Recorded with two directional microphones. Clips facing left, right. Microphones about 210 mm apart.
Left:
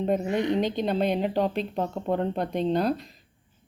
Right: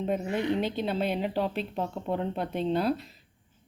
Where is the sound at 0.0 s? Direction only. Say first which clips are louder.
Left 4 dB; 35° left (ahead or behind).